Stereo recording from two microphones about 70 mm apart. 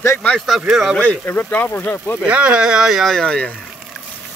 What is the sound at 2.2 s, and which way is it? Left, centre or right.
Speech, centre.